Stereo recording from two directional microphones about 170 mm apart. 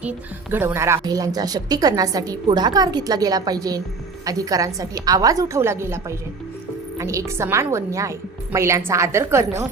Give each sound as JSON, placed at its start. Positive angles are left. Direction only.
{"t": 0.0, "sound": "a woman's voice", "side_deg": -10}